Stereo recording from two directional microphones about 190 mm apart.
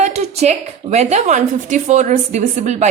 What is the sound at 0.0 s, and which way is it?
A woman's voice, 35° right (ahead or behind).